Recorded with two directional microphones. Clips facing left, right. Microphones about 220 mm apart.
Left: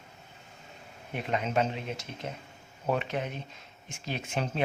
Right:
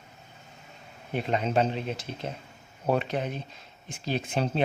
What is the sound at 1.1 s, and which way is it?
Speech, 30° right (ahead or behind).